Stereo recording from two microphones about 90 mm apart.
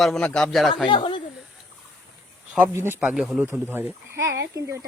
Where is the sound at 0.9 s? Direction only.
60° left (ahead or behind).